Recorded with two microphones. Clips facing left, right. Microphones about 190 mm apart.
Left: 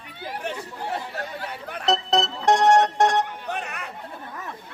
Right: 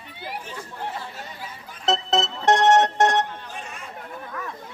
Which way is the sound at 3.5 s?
65° left (ahead or behind).